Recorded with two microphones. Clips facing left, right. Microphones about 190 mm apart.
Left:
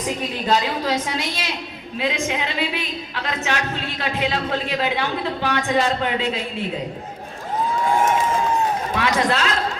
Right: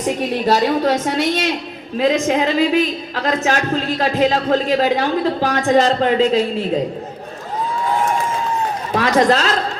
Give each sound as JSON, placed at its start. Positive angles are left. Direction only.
{"t": 0.4, "sound": "a woman's voice", "side_deg": -45}
{"t": 9.0, "sound": "a man's voice", "side_deg": -40}